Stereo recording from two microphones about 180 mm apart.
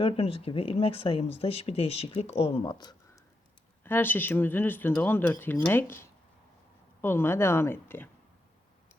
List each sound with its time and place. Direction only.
0.0 s speech: 35° left (ahead or behind)
3.8 s speech: 10° left (ahead or behind)